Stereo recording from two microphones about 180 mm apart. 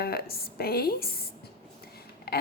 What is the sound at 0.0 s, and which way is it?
A woman's voice, 60° left (ahead or behind).